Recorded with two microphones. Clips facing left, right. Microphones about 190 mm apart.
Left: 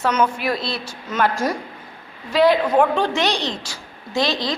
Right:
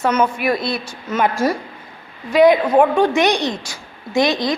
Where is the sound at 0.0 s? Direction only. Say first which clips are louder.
Right 2 dB; 5° right (ahead or behind).